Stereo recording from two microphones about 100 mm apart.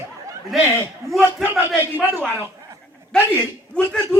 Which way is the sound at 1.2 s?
20° right (ahead or behind).